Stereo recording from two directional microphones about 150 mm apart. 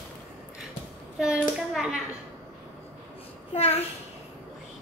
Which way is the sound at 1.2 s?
5° right (ahead or behind).